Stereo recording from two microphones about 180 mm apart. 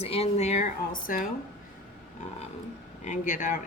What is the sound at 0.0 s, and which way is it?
Speech, 35° left (ahead or behind).